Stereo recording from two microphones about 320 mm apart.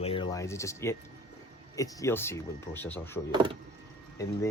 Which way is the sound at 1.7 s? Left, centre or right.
Centre.